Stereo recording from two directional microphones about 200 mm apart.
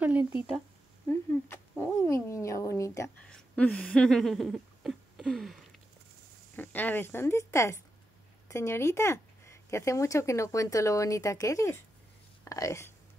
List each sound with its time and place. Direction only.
0.0 s speech: 10° right (ahead or behind)
1.0 s cat: 10° left (ahead or behind)
6.5 s speech: 10° left (ahead or behind)